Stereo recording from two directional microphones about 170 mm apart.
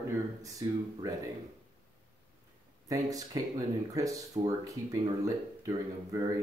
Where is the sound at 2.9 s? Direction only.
20° right (ahead or behind).